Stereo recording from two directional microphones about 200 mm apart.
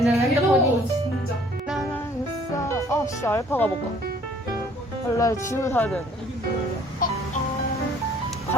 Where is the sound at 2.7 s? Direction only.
15° left (ahead or behind).